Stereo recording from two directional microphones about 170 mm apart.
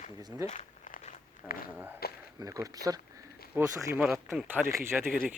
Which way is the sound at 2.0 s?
65° left (ahead or behind).